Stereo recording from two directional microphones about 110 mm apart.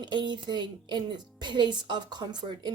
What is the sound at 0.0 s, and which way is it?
Speech, 45° right (ahead or behind).